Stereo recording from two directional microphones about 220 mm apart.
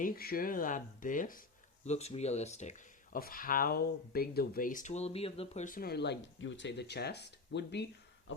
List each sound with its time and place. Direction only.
0.0 s speech: 40° left (ahead or behind)